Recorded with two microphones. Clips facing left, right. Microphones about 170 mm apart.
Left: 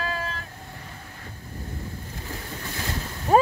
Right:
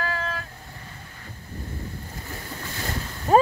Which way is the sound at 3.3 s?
5° left (ahead or behind).